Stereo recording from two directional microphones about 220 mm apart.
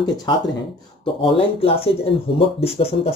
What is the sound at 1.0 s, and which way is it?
Speech, 25° left (ahead or behind).